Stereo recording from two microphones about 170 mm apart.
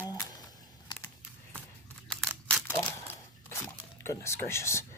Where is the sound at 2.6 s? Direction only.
15° left (ahead or behind).